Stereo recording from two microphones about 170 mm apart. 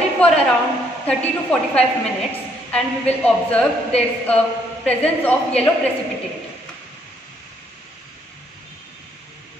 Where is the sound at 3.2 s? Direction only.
10° left (ahead or behind).